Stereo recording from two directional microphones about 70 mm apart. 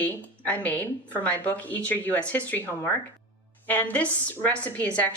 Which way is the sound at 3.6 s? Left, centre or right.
Left.